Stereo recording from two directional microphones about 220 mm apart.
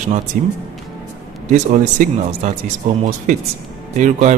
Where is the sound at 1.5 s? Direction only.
35° right (ahead or behind).